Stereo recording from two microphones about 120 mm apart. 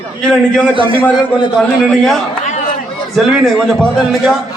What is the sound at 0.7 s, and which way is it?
Speech, 45° right (ahead or behind).